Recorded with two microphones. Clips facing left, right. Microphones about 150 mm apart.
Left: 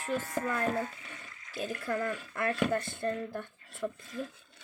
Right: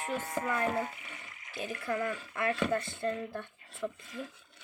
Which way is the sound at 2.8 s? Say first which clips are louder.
Even; 50° left (ahead or behind).